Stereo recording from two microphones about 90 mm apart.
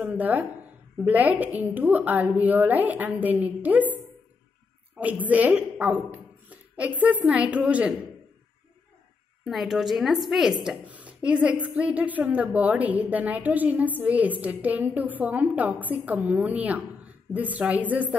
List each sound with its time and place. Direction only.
0.0 s a woman's voice: 20° right (ahead or behind)
5.0 s a woman's voice: 20° right (ahead or behind)
9.4 s a woman's voice: centre (ahead or behind)
10.9 s a woman's voice: 15° right (ahead or behind)